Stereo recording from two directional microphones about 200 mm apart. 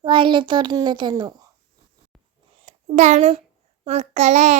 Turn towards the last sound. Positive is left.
turn(degrees=-35)  # may be behind; listen again after turning